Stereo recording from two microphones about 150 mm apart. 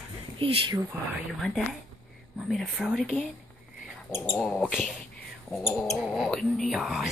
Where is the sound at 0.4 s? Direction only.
35° right (ahead or behind).